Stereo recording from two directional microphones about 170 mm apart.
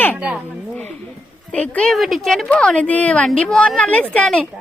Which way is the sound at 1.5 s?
5° left (ahead or behind).